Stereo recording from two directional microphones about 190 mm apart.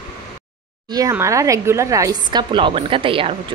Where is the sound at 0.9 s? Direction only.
15° right (ahead or behind).